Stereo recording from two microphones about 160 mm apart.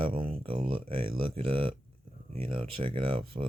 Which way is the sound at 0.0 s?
35° right (ahead or behind).